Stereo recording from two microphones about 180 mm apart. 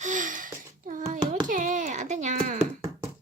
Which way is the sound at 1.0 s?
45° right (ahead or behind).